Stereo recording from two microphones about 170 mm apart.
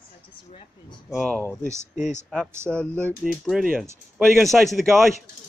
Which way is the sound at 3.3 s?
5° right (ahead or behind).